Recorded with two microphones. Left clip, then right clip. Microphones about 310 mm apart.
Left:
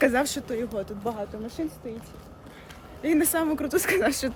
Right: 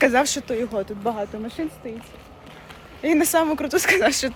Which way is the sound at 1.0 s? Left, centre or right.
Right.